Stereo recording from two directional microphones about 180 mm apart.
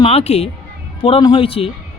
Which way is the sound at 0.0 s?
35° left (ahead or behind).